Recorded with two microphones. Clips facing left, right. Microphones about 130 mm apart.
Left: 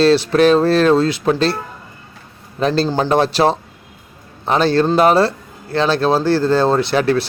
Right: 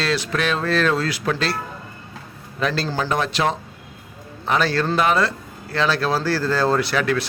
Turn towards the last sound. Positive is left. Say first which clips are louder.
# left 5 dB
turn(degrees=30)  # may be behind; listen again after turning